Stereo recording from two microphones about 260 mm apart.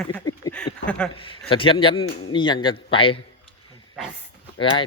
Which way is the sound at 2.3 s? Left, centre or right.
Centre.